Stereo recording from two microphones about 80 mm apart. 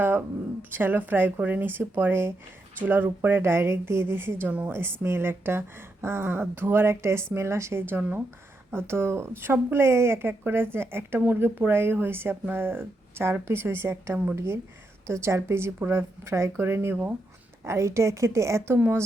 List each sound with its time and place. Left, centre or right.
0.7 s a woman's voice: right
4.4 s speech: centre
4.7 s a woman's voice: right